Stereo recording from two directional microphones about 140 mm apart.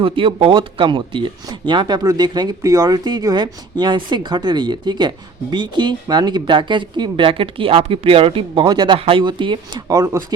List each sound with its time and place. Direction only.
0.0 s speech: 40° right (ahead or behind)